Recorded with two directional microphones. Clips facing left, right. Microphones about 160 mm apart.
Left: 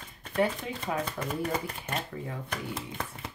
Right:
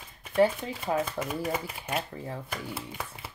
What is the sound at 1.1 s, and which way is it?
Speech, 10° right (ahead or behind).